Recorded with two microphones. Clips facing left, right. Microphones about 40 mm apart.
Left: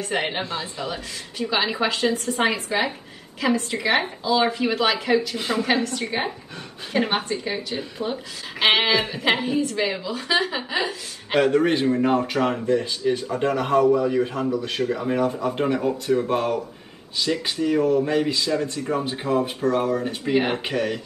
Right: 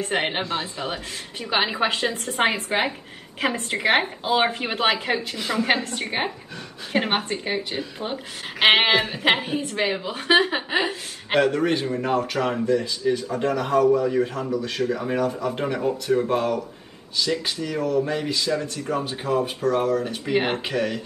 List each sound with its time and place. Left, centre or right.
0.0 s a woman's voice: right
11.4 s a man's voice: left
15.1 s speech: left